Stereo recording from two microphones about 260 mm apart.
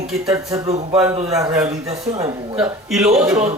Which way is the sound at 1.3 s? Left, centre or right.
Centre.